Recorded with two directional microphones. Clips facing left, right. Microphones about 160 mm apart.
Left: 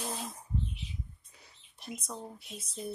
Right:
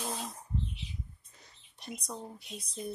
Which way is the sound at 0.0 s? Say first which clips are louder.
Even; centre (ahead or behind).